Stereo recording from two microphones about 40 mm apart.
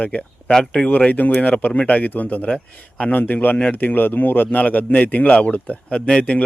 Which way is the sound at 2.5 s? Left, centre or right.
Left.